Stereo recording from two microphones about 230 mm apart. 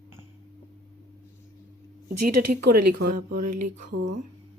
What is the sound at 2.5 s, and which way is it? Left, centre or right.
Speech, right.